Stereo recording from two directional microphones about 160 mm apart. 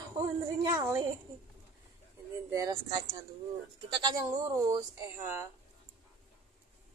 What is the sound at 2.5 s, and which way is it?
Speech, 20° right (ahead or behind).